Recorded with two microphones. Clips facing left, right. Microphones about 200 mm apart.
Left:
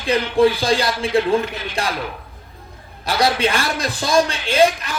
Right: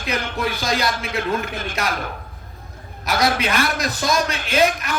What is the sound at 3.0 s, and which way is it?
A man's voice, 30° left (ahead or behind).